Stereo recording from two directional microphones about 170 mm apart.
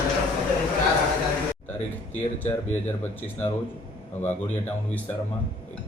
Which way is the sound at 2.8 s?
10° left (ahead or behind).